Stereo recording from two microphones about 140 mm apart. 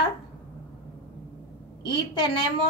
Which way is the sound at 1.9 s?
35° left (ahead or behind).